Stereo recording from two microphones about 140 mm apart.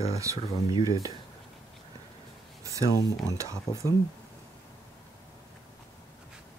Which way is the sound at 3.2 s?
20° right (ahead or behind).